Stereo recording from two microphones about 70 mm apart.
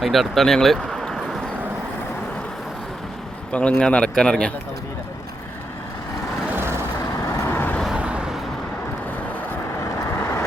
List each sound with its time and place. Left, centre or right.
0.0 s speech: centre
3.5 s a man's voice: centre
7.2 s vehicle: left
7.5 s vehicle: left
7.9 s vehicle: centre
9.8 s vehicle: left